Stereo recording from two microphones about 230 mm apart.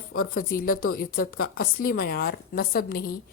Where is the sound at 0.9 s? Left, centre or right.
Left.